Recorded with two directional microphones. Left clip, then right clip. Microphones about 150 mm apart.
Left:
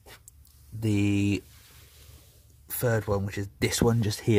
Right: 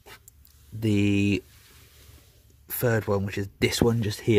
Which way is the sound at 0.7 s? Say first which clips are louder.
Right 3 dB; 15° right (ahead or behind).